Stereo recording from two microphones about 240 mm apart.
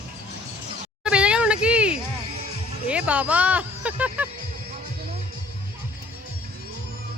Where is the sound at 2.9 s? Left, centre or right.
Centre.